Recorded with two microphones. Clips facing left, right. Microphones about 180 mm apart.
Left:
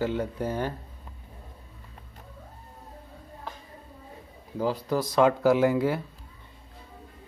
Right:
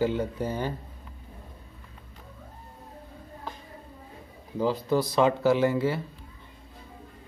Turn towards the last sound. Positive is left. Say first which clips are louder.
# left 1 dB
turn(degrees=0)  # may be behind; listen again after turning